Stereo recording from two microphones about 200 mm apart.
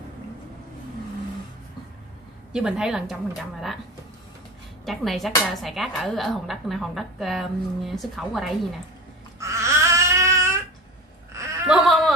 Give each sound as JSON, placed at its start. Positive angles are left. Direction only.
{"t": 2.5, "sound": "a woman's voice", "side_deg": -5}
{"t": 4.8, "sound": "a woman's voice", "side_deg": 0}
{"t": 9.4, "sound": "baby cry", "side_deg": -15}
{"t": 11.6, "sound": "a sound", "side_deg": 0}